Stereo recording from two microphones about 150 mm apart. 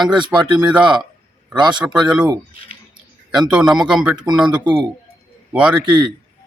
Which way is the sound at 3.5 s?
5° right (ahead or behind).